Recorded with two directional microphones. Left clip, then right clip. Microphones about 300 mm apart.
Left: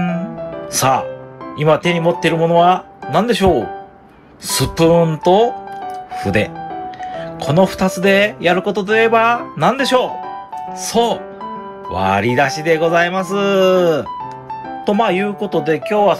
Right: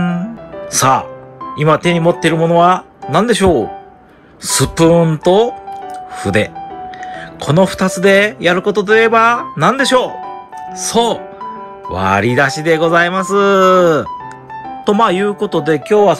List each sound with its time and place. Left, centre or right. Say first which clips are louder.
0.0 s music: right 1 dB; centre
1.6 s speech: right 2 dB; centre
15.9 s speech: right 4 dB; right